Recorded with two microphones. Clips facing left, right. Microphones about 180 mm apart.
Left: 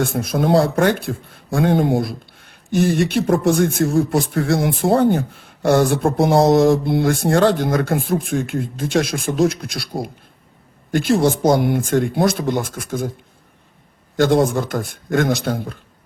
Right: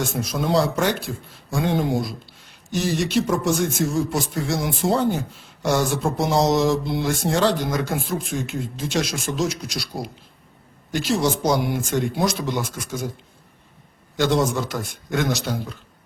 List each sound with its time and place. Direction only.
0.0 s speech: 55° left (ahead or behind)
14.2 s a man's voice: 55° left (ahead or behind)